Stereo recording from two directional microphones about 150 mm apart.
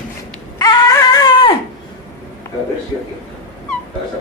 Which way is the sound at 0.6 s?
25° left (ahead or behind).